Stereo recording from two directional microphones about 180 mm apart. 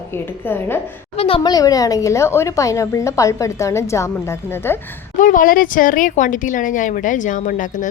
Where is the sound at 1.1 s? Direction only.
35° left (ahead or behind).